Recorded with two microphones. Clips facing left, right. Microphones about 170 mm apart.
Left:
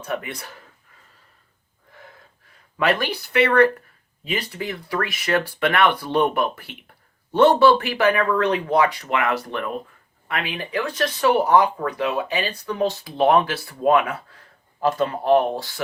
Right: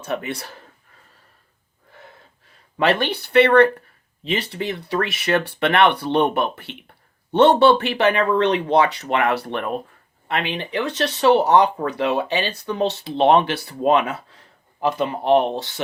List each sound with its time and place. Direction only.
0.0 s speech: 30° right (ahead or behind)
2.7 s speech: 30° right (ahead or behind)
9.3 s speech: 65° right (ahead or behind)
10.2 s speech: 30° right (ahead or behind)
12.9 s speech: 70° right (ahead or behind)
13.1 s speech: 25° right (ahead or behind)